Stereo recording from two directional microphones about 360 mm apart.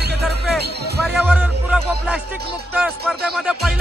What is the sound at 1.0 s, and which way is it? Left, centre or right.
Music, centre.